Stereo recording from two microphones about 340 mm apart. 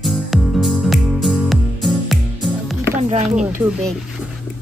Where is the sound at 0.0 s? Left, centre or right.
Centre.